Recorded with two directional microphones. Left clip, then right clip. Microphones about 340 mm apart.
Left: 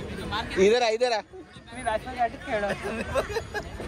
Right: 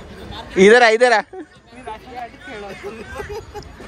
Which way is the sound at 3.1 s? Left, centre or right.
Centre.